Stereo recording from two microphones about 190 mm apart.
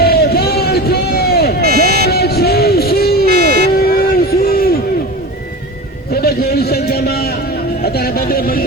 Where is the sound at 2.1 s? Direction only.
55° left (ahead or behind).